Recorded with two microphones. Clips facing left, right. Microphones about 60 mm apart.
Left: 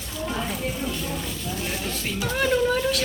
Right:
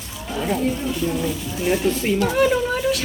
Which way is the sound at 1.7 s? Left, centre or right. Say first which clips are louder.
Right 15 dB; right.